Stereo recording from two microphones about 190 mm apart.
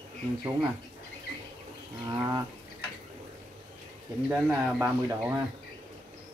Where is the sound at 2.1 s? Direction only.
15° right (ahead or behind).